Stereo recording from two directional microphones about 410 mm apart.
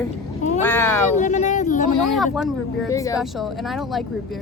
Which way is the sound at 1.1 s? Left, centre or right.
Centre.